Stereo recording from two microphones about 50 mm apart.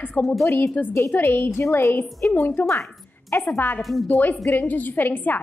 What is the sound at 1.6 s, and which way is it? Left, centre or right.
Speech, left.